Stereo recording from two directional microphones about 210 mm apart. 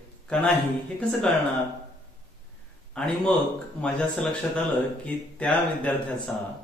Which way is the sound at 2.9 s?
5° left (ahead or behind).